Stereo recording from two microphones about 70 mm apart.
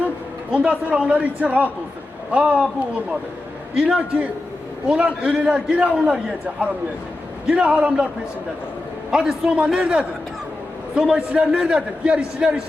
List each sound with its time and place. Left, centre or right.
0.5 s a man's voice: centre
3.8 s a man's voice: centre
7.4 s a man's voice: centre
9.0 s a man's voice: centre